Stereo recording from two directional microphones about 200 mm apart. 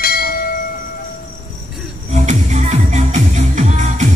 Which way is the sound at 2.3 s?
35° right (ahead or behind).